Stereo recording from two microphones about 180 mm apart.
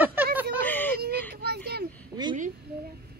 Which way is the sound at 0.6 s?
10° left (ahead or behind).